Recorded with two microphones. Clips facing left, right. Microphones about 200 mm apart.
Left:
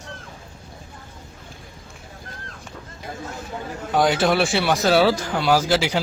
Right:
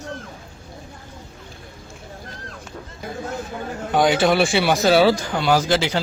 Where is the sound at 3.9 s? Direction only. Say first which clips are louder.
Right 2 dB; centre (ahead or behind).